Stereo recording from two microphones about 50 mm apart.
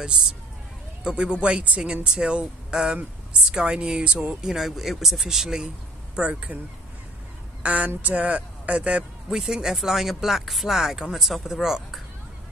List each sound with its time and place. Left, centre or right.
1.0 s speech: right
4.4 s speech: centre
6.1 s speech: right
7.6 s speech: right
9.3 s speech: centre